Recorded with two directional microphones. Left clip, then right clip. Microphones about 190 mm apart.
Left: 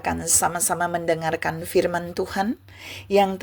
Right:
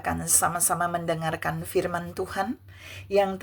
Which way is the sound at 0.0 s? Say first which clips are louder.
Left 3 dB; 20° left (ahead or behind).